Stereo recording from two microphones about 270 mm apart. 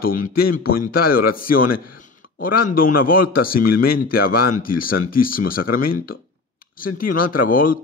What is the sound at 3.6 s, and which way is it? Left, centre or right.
Speech, left.